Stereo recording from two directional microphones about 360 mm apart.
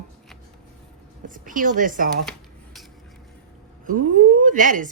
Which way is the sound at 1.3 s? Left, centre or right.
Right.